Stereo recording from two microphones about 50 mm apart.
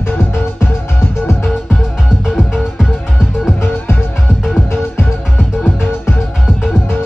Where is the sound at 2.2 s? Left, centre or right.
Centre.